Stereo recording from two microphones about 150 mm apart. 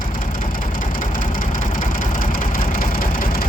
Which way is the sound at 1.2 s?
65° left (ahead or behind).